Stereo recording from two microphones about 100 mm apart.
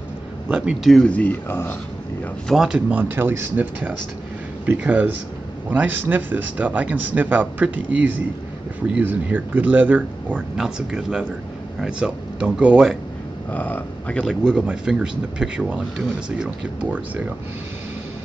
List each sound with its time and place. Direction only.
0.5 s a man's voice: 10° right (ahead or behind)
0.8 s speech: 10° left (ahead or behind)
2.4 s speech: 5° right (ahead or behind)
3.0 s a man's voice: 20° right (ahead or behind)
10.6 s a man's voice: 5° right (ahead or behind)
13.5 s speech: 15° left (ahead or behind)
14.2 s a man's voice: 5° right (ahead or behind)